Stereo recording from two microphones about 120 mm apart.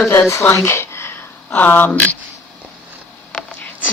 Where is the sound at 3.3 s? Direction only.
10° left (ahead or behind).